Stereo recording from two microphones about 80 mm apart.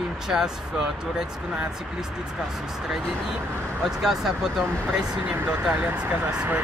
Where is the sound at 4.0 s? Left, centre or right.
Centre.